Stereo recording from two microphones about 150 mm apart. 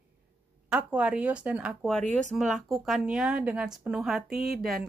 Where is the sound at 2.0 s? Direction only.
55° right (ahead or behind).